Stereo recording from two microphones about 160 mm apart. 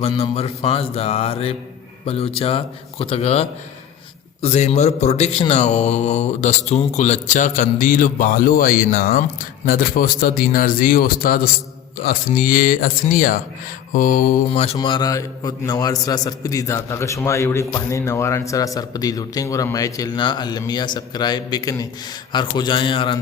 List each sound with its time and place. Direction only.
0.0 s mantra: 40° left (ahead or behind)
4.4 s speech: 45° left (ahead or behind); by 14.3 s 60° left (ahead or behind)
14.5 s mantra: 40° left (ahead or behind)
14.8 s a man's voice: 25° left (ahead or behind)
22.3 s mantra: 30° left (ahead or behind)